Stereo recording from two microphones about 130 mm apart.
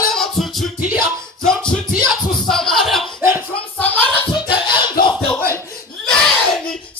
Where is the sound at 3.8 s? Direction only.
10° left (ahead or behind).